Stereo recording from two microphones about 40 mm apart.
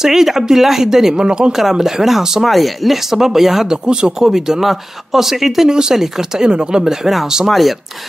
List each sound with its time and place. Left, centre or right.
0.0 s speech: centre
1.5 s speech: centre
2.4 s speech: centre
3.7 s speech: centre
4.2 s speech: centre
5.7 s speech: centre
6.5 s speech: right
6.8 s speech: centre